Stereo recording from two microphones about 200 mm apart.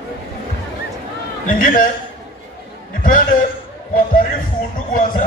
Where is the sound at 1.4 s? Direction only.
40° left (ahead or behind).